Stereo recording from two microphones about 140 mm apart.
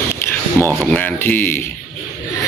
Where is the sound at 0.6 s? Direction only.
15° left (ahead or behind).